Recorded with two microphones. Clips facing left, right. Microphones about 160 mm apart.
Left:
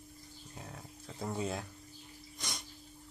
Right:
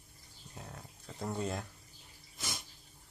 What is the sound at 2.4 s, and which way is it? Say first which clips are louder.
Sneeze: right 1 dB; centre (ahead or behind).